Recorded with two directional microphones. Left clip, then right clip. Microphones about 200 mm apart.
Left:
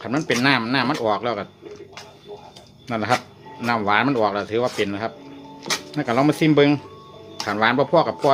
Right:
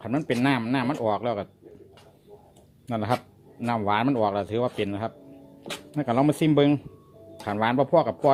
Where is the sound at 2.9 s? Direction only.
25° right (ahead or behind).